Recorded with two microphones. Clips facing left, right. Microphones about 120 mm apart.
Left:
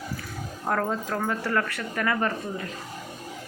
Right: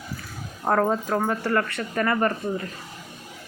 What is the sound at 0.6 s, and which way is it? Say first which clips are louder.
Speech: right 5 dB; 40° right (ahead or behind).